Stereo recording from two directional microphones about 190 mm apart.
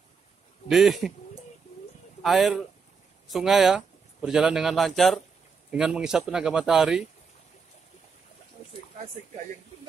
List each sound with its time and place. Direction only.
0.7 s speech: centre (ahead or behind)
2.2 s a man's voice: centre (ahead or behind)